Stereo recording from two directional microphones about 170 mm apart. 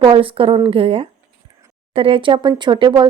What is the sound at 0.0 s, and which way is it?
A woman's voice, 30° right (ahead or behind).